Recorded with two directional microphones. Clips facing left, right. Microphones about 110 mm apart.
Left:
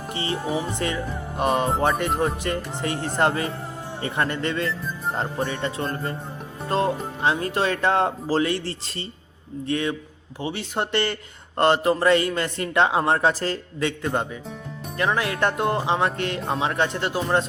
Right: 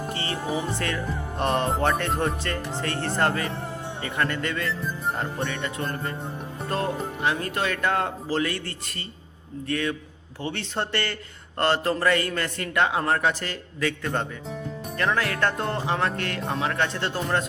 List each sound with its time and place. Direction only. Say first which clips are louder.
0.1 s music: left 8 dB; 20° left (ahead or behind)
0.7 s a man's voice: left 2 dB; 15° left (ahead or behind)
14.0 s a man's voice: left 3 dB; 15° left (ahead or behind)